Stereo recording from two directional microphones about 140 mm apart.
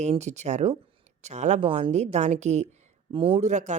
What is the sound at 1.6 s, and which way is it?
Speech, 40° right (ahead or behind).